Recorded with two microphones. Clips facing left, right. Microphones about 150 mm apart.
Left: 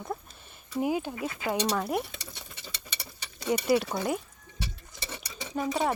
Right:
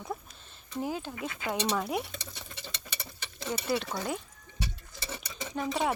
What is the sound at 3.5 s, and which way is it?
Speech, 10° left (ahead or behind).